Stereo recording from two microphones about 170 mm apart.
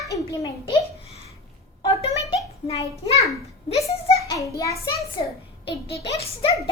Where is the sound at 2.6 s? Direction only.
35° left (ahead or behind).